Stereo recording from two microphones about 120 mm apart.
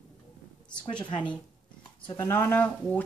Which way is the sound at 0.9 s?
40° left (ahead or behind).